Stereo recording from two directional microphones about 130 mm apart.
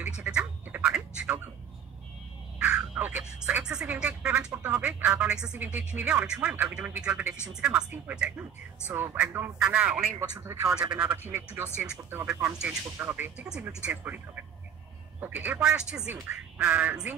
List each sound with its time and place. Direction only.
0.2 s quack: 10° right (ahead or behind)
2.6 s speech: 10° right (ahead or behind)
10.4 s speech: 20° right (ahead or behind)
10.7 s speech: 10° right (ahead or behind)